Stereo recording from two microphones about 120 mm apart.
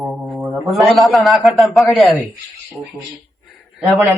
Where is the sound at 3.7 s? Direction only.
Centre (ahead or behind).